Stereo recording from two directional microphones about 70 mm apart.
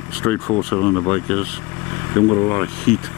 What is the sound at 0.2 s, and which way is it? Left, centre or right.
Speech, left.